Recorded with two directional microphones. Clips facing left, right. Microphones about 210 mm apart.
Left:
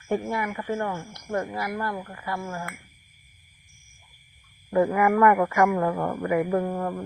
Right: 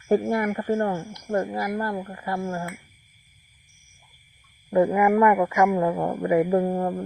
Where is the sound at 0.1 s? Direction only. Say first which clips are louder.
Right 6 dB; 40° right (ahead or behind).